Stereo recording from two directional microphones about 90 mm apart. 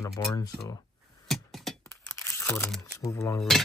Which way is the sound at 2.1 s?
25° left (ahead or behind).